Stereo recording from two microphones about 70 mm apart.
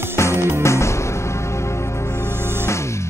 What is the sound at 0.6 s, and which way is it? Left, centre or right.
Music, left.